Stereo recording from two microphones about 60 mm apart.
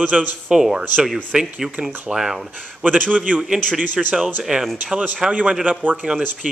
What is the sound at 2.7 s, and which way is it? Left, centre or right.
A man's voice, right.